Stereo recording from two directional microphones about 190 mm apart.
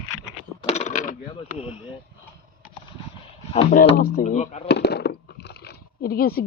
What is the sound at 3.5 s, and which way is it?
Speech, 35° left (ahead or behind).